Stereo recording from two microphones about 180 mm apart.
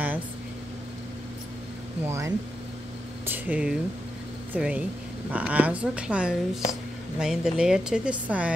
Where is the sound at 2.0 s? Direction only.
15° right (ahead or behind).